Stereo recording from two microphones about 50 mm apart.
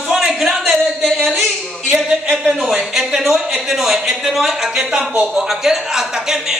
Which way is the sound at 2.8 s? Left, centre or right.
Centre.